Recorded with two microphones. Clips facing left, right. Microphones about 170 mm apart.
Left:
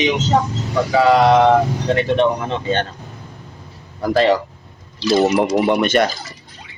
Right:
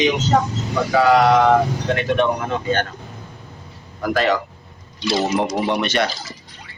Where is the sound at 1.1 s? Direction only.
25° left (ahead or behind).